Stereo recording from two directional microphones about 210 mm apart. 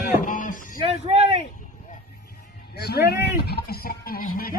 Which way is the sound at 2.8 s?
50° left (ahead or behind).